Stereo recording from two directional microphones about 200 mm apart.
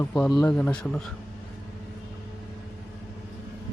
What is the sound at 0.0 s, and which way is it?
Speech, centre (ahead or behind).